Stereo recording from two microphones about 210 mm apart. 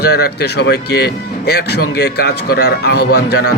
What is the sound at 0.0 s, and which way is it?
Speech, 50° left (ahead or behind).